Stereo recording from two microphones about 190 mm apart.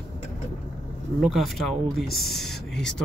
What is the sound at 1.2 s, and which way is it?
Speech, centre (ahead or behind).